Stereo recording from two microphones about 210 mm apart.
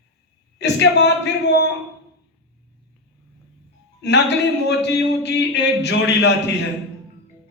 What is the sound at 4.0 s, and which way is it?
Speech, 55° left (ahead or behind).